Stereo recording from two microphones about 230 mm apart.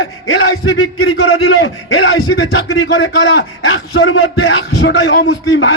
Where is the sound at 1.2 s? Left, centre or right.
Left.